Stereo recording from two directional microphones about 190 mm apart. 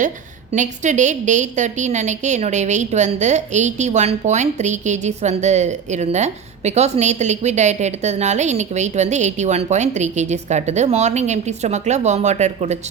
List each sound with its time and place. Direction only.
0.5 s a woman's voice: 40° right (ahead or behind)